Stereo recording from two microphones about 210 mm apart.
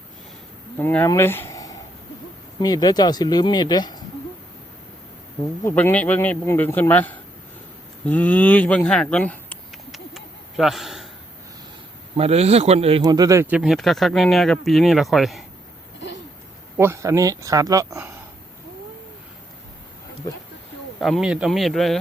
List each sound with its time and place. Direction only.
0.8 s speech: 10° left (ahead or behind)
5.6 s speech: 10° left (ahead or behind)
8.0 s a sound: 10° left (ahead or behind)
12.1 s speech: 30° right (ahead or behind)
13.0 s speech: 15° right (ahead or behind)
13.6 s speech: centre (ahead or behind)
16.7 s speech: 10° right (ahead or behind)
21.0 s speech: centre (ahead or behind)